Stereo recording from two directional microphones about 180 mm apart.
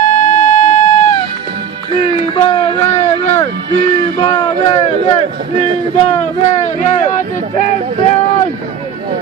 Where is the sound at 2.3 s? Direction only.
30° left (ahead or behind).